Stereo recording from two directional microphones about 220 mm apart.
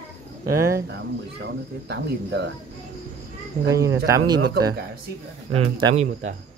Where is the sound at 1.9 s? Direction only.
50° right (ahead or behind).